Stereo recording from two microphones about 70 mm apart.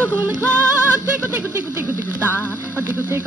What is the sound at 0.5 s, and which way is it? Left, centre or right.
Music, right.